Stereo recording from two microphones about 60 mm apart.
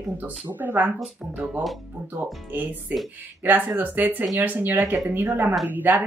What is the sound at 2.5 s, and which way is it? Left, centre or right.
Speech, right.